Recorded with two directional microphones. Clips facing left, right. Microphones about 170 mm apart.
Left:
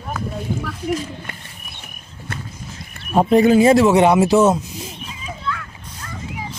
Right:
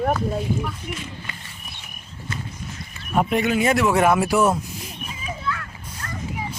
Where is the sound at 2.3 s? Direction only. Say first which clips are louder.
Left 1 dB; 60° left (ahead or behind).